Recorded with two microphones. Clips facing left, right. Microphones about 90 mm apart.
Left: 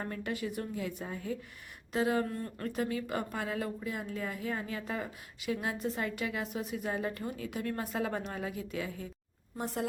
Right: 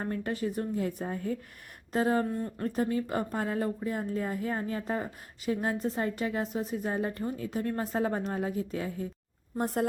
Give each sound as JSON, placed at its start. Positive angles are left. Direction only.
{"t": 0.0, "sound": "a woman's voice", "side_deg": -35}
{"t": 2.3, "sound": "speech", "side_deg": -20}
{"t": 2.6, "sound": "a woman's voice", "side_deg": -35}
{"t": 9.6, "sound": "a woman's voice", "side_deg": -50}